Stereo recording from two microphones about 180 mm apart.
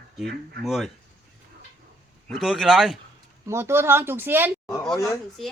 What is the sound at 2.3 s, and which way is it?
Speech, centre (ahead or behind).